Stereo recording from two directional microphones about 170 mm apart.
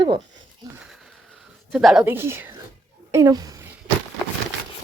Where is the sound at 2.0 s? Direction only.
15° right (ahead or behind).